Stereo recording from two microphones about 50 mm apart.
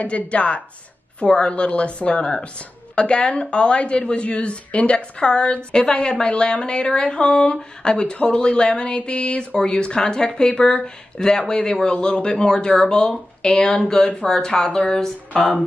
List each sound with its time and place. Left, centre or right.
0.3 s a woman's voice: left